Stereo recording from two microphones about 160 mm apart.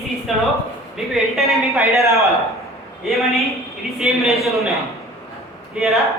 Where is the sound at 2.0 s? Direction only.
20° right (ahead or behind).